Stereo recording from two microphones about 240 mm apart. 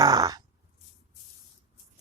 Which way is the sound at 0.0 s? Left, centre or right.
Centre.